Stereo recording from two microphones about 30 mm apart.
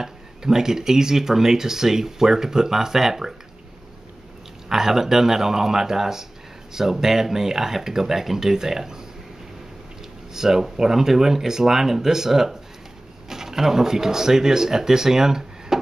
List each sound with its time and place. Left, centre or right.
0.0 s speech: centre
4.6 s speech: centre
10.3 s speech: centre